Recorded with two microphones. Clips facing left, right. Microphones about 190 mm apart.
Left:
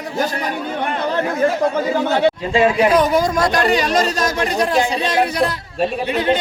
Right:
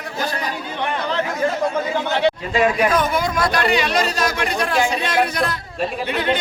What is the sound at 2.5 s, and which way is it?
Speech, 30° left (ahead or behind).